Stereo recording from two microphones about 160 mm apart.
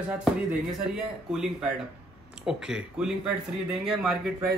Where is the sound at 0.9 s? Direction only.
5° right (ahead or behind).